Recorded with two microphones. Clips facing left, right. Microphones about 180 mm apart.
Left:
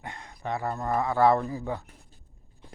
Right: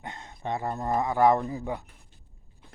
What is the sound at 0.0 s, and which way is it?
Speech, 20° right (ahead or behind).